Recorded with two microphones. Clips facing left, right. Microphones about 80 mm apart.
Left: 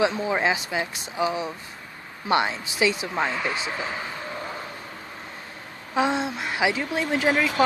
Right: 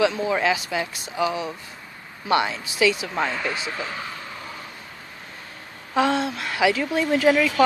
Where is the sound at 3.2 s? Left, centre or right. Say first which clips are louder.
Right 1 dB; centre.